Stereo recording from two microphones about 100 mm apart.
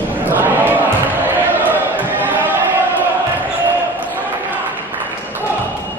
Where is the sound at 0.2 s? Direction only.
20° right (ahead or behind).